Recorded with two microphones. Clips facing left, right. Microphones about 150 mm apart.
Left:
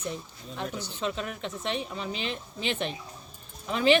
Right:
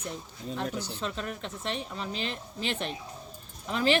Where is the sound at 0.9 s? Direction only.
5° left (ahead or behind).